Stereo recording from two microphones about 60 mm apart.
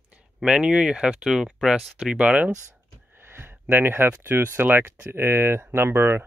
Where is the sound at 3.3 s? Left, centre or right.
Right.